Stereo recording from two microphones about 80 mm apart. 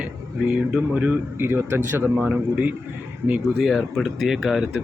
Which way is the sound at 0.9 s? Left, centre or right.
Right.